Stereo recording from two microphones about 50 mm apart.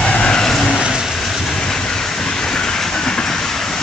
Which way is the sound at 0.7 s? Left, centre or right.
Centre.